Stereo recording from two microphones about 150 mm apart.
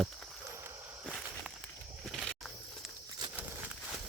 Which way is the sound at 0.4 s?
20° right (ahead or behind).